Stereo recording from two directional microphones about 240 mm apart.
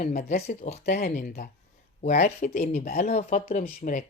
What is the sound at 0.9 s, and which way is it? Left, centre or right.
Speech, left.